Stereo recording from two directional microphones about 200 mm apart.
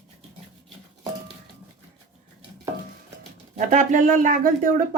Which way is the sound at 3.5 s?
40° right (ahead or behind).